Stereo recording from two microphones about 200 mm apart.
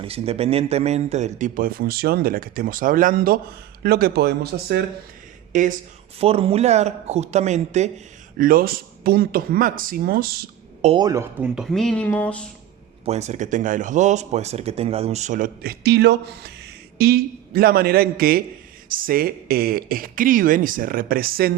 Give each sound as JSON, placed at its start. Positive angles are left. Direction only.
{"t": 0.0, "sound": "speech", "side_deg": -30}
{"t": 5.5, "sound": "speech", "side_deg": -40}
{"t": 6.1, "sound": "speech", "side_deg": -30}
{"t": 10.8, "sound": "speech", "side_deg": -20}
{"t": 13.1, "sound": "speech", "side_deg": -35}